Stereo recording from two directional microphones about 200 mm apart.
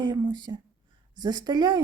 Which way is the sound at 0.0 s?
20° right (ahead or behind).